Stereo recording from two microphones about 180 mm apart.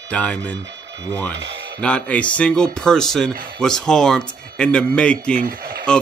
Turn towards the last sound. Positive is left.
turn(degrees=-55)  # may be behind; listen again after turning